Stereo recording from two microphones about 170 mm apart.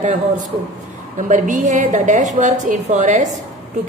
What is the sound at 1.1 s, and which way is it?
A woman's voice, 45° right (ahead or behind).